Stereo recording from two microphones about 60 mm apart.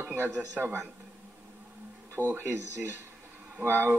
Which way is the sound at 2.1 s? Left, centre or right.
Right.